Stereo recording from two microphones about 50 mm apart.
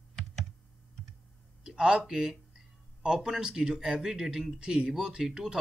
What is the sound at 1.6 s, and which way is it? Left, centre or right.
Speech, centre.